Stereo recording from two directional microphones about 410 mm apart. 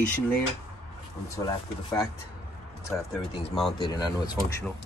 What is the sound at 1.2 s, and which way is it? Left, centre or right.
Speech, centre.